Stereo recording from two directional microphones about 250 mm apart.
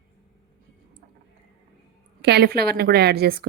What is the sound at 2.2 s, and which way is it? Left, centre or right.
A woman's voice, right.